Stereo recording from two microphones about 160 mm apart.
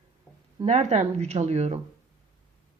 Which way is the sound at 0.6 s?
45° right (ahead or behind).